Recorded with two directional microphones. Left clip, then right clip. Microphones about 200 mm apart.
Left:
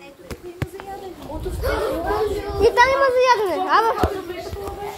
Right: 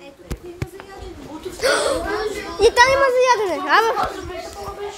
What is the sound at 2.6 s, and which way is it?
Speech, 25° right (ahead or behind).